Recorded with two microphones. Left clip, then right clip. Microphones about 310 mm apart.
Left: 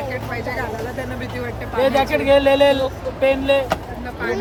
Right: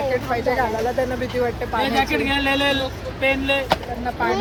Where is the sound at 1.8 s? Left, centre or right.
Left.